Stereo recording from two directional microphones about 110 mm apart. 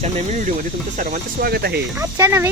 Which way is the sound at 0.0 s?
80° right.